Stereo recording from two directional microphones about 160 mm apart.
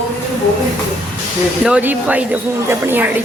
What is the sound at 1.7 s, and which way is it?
Speech, 10° right (ahead or behind).